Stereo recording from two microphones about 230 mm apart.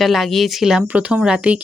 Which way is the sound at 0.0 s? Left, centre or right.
Centre.